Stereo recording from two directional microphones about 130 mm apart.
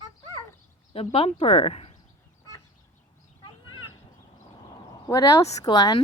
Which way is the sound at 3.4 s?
35° left (ahead or behind).